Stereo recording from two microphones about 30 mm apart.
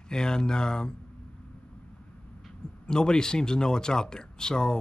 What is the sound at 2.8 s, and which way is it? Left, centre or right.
Speech, left.